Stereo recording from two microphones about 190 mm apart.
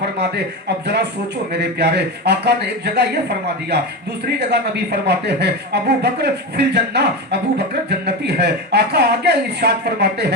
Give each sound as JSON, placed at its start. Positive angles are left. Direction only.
{"t": 1.5, "sound": "speech", "side_deg": -60}